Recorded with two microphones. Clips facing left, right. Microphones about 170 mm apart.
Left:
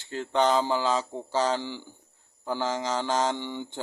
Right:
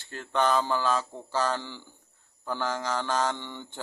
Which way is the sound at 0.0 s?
20° left (ahead or behind).